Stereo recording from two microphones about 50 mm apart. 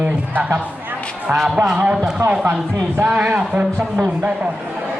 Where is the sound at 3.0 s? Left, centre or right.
Right.